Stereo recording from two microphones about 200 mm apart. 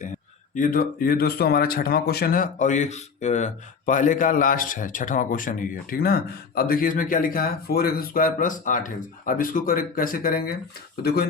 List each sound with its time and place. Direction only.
0.5 s speech: 40° left (ahead or behind)